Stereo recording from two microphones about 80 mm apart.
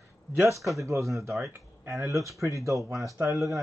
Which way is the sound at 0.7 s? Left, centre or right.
Right.